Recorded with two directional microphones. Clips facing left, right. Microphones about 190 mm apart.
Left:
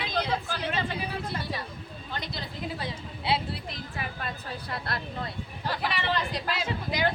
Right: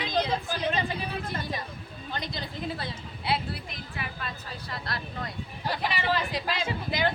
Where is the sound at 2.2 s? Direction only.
Centre (ahead or behind).